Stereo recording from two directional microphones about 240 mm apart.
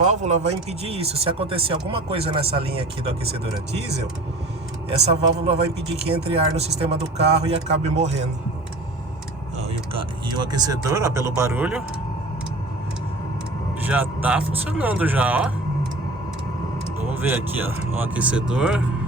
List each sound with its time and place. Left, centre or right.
0.0 s speech: right
4.9 s speech: right
9.6 s speech: right; by 11.8 s centre
13.8 s speech: centre
17.2 s speech: centre